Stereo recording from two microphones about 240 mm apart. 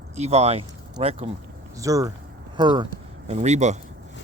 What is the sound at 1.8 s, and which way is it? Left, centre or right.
Speech, centre.